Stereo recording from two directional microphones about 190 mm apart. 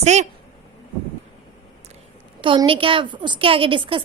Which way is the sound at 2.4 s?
25° right (ahead or behind).